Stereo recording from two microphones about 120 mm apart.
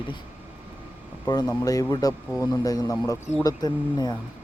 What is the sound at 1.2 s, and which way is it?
Speech, 35° left (ahead or behind).